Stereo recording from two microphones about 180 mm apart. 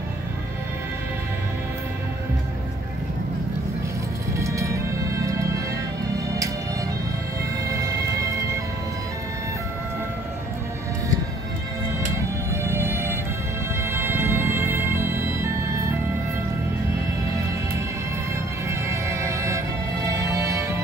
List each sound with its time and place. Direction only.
4.3 s music: 15° right (ahead or behind)
7.7 s music: 20° right (ahead or behind)
12.2 s music: 15° right (ahead or behind)
18.7 s music: 15° right (ahead or behind)